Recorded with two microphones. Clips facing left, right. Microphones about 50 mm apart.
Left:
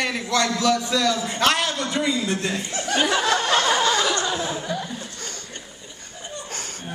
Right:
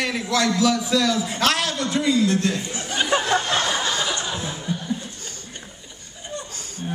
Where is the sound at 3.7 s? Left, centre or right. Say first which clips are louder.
Left 4 dB; left.